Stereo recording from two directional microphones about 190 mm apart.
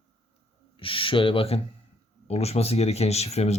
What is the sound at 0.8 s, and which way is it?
Speech, 25° left (ahead or behind).